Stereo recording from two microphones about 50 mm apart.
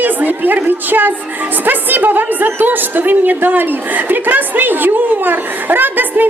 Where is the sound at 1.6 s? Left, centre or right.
Right.